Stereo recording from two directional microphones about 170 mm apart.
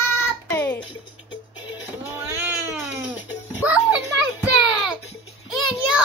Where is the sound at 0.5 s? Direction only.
20° left (ahead or behind).